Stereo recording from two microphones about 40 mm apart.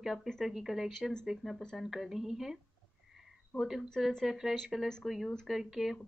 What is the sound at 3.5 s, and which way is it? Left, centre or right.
Speech, centre.